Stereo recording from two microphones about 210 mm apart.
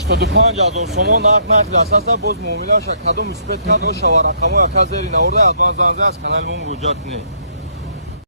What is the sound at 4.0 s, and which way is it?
Speech, 55° right (ahead or behind).